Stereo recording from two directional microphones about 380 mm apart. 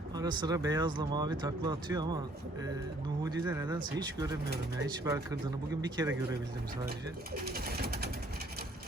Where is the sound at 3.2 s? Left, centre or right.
Centre.